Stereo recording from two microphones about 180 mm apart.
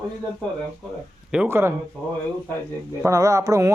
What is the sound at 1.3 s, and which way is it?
Speech, 10° right (ahead or behind).